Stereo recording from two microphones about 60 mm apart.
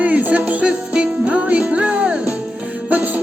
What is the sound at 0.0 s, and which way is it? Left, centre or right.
Music, right.